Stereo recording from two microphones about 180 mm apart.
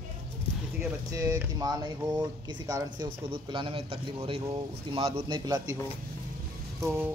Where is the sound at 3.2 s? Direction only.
30° right (ahead or behind).